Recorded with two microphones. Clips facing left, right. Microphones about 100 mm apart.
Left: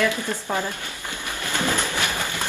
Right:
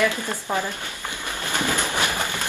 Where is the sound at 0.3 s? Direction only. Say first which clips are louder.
Even; 15° right (ahead or behind).